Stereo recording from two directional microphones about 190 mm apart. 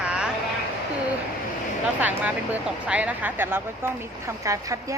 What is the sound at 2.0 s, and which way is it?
Speech, 10° right (ahead or behind).